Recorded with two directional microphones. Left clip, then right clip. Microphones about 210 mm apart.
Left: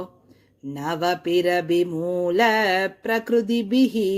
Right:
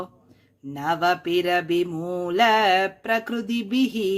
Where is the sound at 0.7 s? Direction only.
5° left (ahead or behind).